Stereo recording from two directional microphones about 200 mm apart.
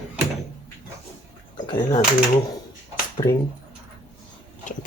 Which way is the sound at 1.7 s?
20° left (ahead or behind).